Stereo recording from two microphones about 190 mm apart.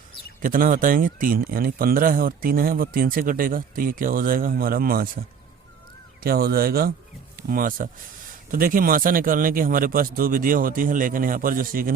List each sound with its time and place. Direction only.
0.4 s speech: 45° right (ahead or behind)
6.2 s speech: 50° right (ahead or behind)